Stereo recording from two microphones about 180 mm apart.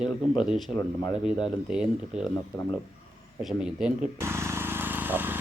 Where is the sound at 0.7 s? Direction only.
15° left (ahead or behind).